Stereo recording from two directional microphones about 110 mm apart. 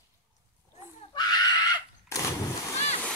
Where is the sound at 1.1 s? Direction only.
40° left (ahead or behind).